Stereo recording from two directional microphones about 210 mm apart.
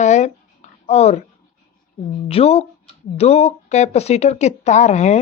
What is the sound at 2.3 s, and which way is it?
A woman's voice, 30° left (ahead or behind).